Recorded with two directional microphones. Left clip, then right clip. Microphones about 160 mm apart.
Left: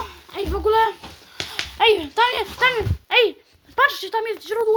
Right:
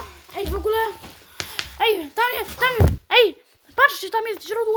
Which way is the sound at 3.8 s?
15° right (ahead or behind).